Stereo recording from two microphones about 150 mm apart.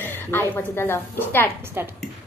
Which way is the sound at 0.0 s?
15° left (ahead or behind).